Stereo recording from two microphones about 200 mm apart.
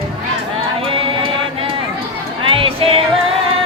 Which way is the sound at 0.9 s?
25° right (ahead or behind).